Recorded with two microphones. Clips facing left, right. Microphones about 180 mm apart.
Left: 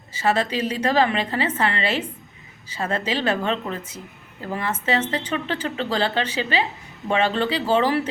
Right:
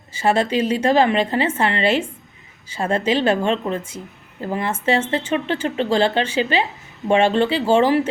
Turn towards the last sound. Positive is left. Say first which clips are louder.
# right 4 dB
turn(degrees=-30)  # may be behind; listen again after turning